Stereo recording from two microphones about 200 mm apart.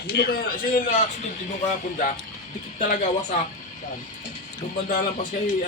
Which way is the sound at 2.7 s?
40° left (ahead or behind).